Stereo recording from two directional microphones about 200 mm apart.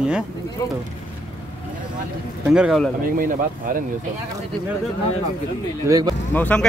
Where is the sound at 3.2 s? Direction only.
45° right (ahead or behind).